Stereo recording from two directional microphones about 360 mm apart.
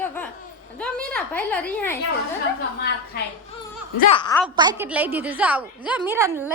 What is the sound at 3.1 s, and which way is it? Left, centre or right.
Speech, left.